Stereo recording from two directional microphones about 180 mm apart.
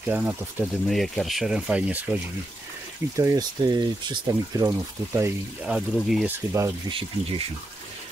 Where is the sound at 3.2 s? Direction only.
20° right (ahead or behind); by 6.2 s centre (ahead or behind).